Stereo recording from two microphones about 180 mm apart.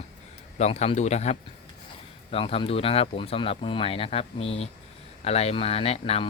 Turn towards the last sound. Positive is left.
turn(degrees=35)  # may be behind; listen again after turning